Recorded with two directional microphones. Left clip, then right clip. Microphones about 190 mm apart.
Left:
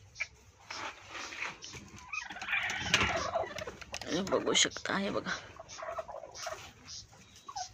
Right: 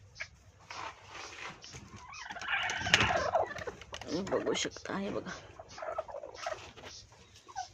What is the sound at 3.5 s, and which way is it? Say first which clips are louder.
Gobble: even; 40° right (ahead or behind).